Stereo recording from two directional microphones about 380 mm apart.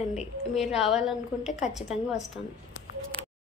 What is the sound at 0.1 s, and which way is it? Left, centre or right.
A woman's voice, centre.